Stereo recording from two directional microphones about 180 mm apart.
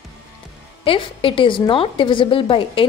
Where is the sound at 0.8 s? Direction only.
30° left (ahead or behind).